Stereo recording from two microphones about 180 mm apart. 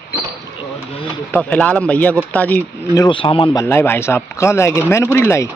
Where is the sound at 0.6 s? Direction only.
25° left (ahead or behind).